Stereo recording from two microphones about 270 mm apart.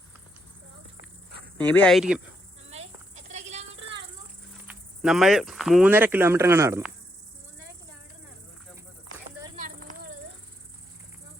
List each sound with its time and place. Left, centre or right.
1.6 s speech: centre
2.6 s insect: right
4.7 s speech: centre
9.6 s a sound: right